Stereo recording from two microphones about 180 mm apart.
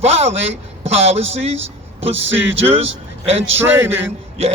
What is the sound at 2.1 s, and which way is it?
Speech, 90° right.